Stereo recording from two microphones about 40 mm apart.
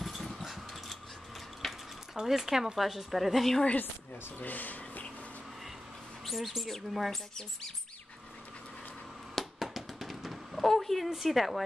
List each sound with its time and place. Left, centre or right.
0.0 s dog: centre
1.6 s mechanisms: centre
2.1 s speech: centre
4.4 s speech: left
6.2 s speech: centre
7.1 s speech: centre
9.3 s a sound: centre
10.5 s speech: centre